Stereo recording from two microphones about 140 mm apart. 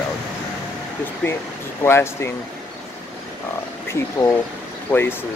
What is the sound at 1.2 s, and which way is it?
Speech, 10° left (ahead or behind).